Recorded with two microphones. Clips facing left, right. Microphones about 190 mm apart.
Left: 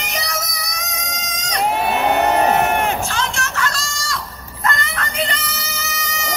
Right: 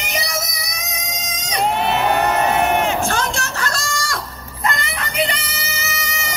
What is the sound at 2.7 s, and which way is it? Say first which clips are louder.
Crowd: right 1 dB; 55° left (ahead or behind).